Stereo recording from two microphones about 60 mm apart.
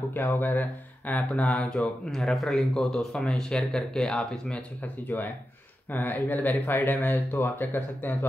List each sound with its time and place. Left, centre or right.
0.1 s speech: left
1.4 s speech: centre
5.0 s speech: left